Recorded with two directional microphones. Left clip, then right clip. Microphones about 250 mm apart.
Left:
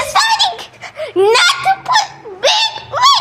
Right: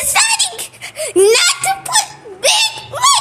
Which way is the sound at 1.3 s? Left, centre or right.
Centre.